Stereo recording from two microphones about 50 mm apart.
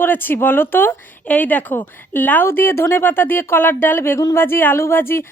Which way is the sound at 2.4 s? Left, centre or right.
Left.